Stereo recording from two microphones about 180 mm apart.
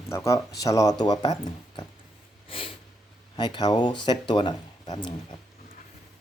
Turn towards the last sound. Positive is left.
turn(degrees=25)  # may be behind; listen again after turning